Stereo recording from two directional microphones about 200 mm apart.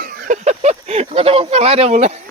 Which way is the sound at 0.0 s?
45° right (ahead or behind).